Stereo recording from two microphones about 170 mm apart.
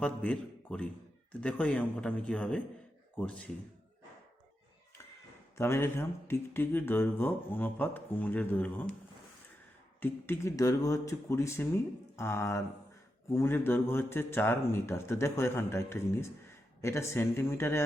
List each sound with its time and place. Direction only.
0.0 s a man's voice: 5° left (ahead or behind)
5.5 s speech: 15° left (ahead or behind)
10.0 s speech: 15° left (ahead or behind)